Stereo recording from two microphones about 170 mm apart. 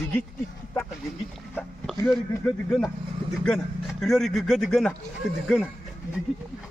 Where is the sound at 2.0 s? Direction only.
10° left (ahead or behind).